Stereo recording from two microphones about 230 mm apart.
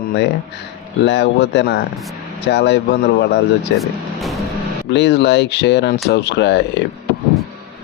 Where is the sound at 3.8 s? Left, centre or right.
Centre.